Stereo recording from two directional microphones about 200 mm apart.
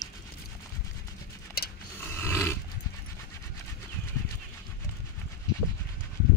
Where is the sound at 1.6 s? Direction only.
50° left (ahead or behind).